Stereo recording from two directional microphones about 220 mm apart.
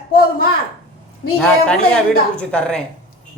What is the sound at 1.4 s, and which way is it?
Speech, 5° left (ahead or behind).